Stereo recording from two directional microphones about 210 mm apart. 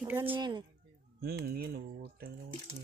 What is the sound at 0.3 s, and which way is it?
Speech, 20° right (ahead or behind).